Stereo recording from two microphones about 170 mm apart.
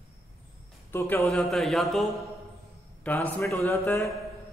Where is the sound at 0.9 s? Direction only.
15° left (ahead or behind).